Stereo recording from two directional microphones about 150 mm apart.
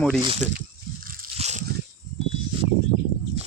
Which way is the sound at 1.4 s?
50° right (ahead or behind).